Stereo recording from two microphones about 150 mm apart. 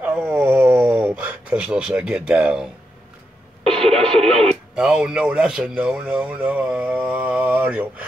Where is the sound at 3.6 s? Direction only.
40° right (ahead or behind).